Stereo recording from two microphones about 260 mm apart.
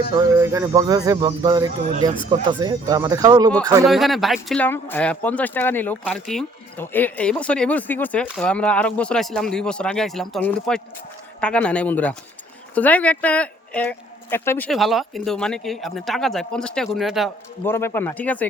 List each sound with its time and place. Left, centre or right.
0.3 s speech: centre
3.8 s speech: centre